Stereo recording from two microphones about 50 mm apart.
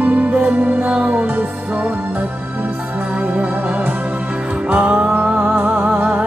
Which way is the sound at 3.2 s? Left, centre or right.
Right.